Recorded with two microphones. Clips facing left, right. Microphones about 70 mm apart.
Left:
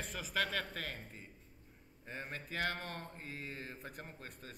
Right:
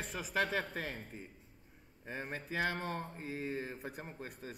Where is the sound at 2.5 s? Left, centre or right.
Centre.